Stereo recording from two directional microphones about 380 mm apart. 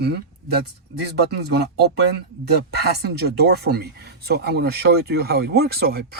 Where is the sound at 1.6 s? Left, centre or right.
Right.